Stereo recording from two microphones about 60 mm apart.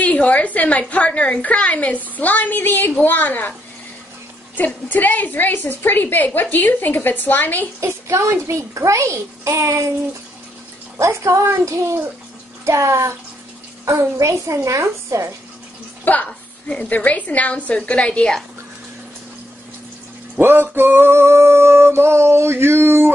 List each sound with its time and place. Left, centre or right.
0.0 s a woman's voice: left
4.6 s a woman's voice: left
7.8 s a child's voice: right
11.0 s a child's voice: right
12.6 s music: right
14.4 s a child's voice: right
16.3 s a sound: centre
16.9 s a woman's voice: left
20.3 s music: right